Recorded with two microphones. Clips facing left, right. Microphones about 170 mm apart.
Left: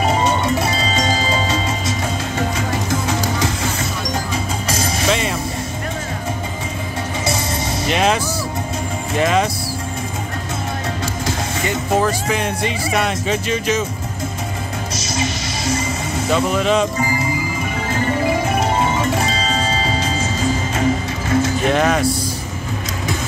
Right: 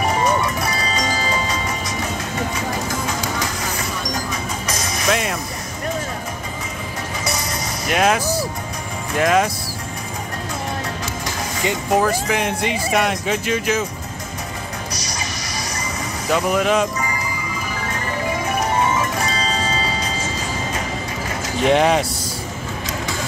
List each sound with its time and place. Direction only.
0.1 s music: 25° left (ahead or behind)
4.6 s music: 30° left (ahead or behind)
7.9 s speech: 5° right (ahead or behind)
9.2 s speech: 5° right (ahead or behind)
12.0 s speech: 10° right (ahead or behind)
14.9 s music: 25° left (ahead or behind)
16.3 s speech: 15° right (ahead or behind)
17.0 s music: 30° left (ahead or behind)
21.6 s speech: 20° right (ahead or behind)